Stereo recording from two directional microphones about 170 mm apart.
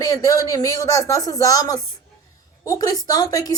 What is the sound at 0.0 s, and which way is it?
A woman's voice, 20° left (ahead or behind).